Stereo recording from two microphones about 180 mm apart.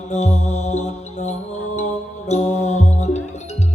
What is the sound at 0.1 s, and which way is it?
Mantra, 40° left (ahead or behind).